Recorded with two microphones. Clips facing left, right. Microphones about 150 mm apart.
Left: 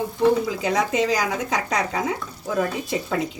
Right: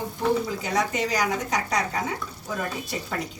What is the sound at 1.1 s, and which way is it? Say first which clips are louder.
Speech: left 2 dB; 90° left.